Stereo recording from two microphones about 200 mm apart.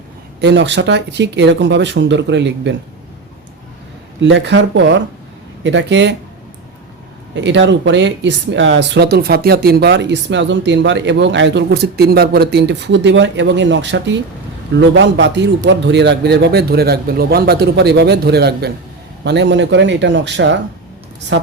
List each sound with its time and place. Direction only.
0.4 s speech: 60° right (ahead or behind)
4.2 s speech: 65° right (ahead or behind)
7.4 s speech: 65° right (ahead or behind)